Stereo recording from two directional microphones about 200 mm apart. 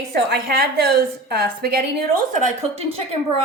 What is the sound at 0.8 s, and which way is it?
A woman's voice, 55° right (ahead or behind).